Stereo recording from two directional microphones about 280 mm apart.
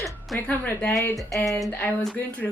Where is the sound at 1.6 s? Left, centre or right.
Centre.